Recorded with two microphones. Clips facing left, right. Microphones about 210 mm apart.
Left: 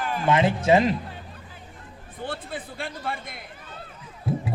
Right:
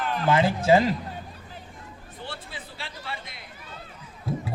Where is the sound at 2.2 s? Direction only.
50° left (ahead or behind).